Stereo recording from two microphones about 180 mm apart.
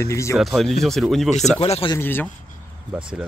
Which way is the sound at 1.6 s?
30° left (ahead or behind).